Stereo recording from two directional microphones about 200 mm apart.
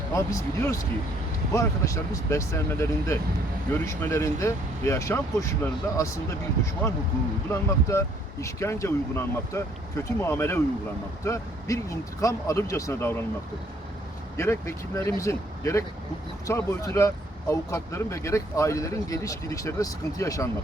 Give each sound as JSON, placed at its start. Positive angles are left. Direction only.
{"t": 0.1, "sound": "speech", "side_deg": 15}
{"t": 7.5, "sound": "speech", "side_deg": 15}
{"t": 14.3, "sound": "speech", "side_deg": 15}